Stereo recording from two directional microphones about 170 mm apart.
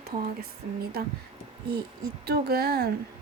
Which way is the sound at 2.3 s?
65° right (ahead or behind).